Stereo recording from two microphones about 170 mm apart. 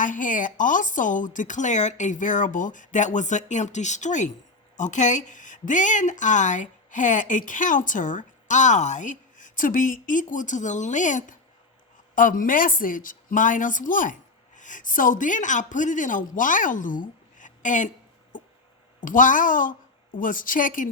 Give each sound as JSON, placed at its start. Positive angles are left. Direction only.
{"t": 0.0, "sound": "a woman's voice", "side_deg": 50}